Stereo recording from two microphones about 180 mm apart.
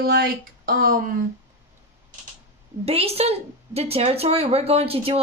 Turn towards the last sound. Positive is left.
turn(degrees=-30)  # may be behind; listen again after turning